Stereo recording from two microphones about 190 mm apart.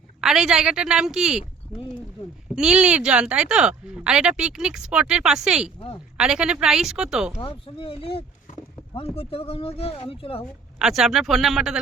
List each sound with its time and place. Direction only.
0.2 s speech: 5° right (ahead or behind)
2.6 s speech: 5° right (ahead or behind)
7.4 s speech: 30° left (ahead or behind)
10.8 s speech: centre (ahead or behind)